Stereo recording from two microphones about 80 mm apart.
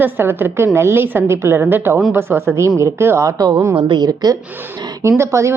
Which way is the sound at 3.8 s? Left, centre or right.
Right.